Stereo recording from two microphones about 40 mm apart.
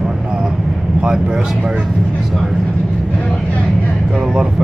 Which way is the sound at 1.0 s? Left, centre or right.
Centre.